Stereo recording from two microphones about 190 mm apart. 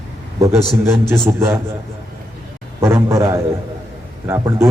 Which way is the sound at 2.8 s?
15° right (ahead or behind).